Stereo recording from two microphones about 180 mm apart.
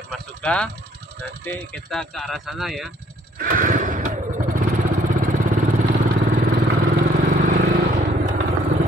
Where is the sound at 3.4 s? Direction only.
50° right (ahead or behind).